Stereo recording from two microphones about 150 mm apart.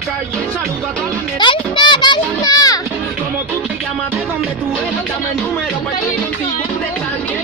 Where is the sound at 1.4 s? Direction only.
30° left (ahead or behind).